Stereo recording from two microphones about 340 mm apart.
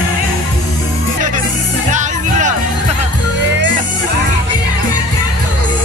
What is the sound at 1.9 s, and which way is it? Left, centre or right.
Music, right.